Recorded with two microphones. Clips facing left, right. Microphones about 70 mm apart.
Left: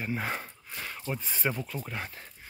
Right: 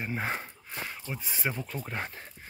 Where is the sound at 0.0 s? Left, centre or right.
Right.